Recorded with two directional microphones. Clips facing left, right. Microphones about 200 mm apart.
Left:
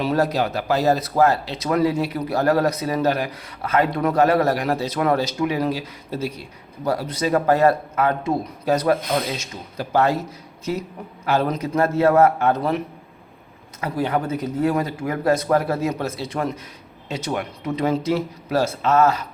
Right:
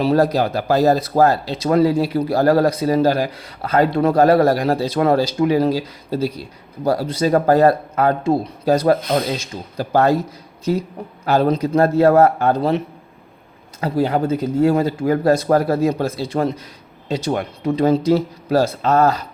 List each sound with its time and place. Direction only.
0.0 s speech: 35° right (ahead or behind)
13.8 s speech: 30° right (ahead or behind)